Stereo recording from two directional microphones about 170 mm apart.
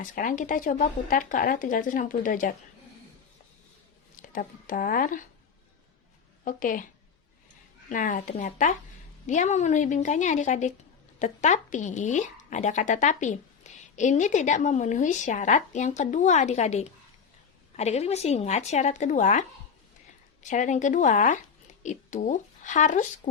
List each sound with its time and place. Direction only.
0.0 s speech: 50° left (ahead or behind)
4.2 s speech: 50° left (ahead or behind)
6.4 s speech: 55° left (ahead or behind)
7.9 s speech: 50° left (ahead or behind)
20.5 s speech: 45° left (ahead or behind)